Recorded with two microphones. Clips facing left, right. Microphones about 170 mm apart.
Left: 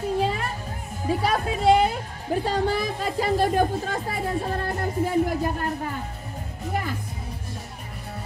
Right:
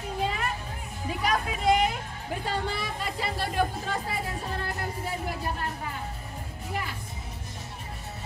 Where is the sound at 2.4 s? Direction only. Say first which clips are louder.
Left 6 dB; 40° left (ahead or behind).